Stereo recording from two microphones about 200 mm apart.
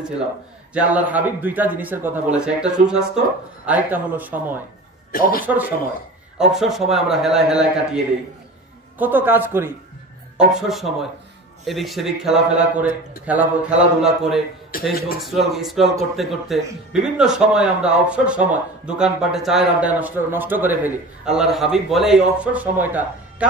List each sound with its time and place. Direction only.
0.7 s a man's voice: 10° right (ahead or behind)
5.1 s speech: 45° left (ahead or behind)
6.5 s a man's voice: centre (ahead or behind)
14.7 s a man's voice: 45° left (ahead or behind)
15.2 s a man's voice: centre (ahead or behind)